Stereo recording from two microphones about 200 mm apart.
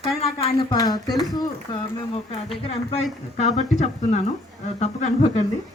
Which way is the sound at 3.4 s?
35° left (ahead or behind).